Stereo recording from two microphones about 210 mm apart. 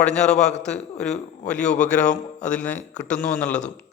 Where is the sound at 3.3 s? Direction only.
5° left (ahead or behind).